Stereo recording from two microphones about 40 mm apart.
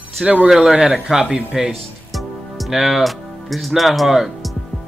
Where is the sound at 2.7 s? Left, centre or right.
Centre.